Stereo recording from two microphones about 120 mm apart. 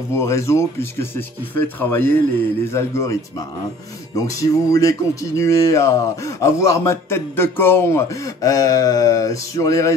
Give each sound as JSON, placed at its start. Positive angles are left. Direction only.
{"t": 0.1, "sound": "a man's voice", "side_deg": 25}